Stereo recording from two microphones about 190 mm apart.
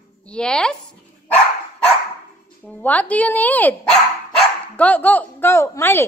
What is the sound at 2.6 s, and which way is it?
A woman's voice, 10° left (ahead or behind).